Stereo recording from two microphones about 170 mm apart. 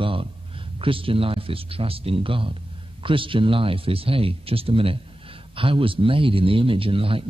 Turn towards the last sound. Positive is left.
turn(degrees=-30)  # may be behind; listen again after turning